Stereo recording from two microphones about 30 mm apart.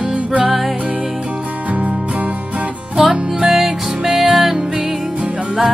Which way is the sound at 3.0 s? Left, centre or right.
Centre.